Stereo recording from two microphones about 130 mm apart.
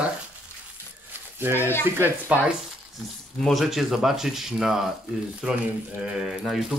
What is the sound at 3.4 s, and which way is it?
Speech, centre (ahead or behind).